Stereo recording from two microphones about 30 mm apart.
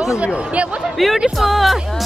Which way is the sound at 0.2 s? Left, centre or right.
Right.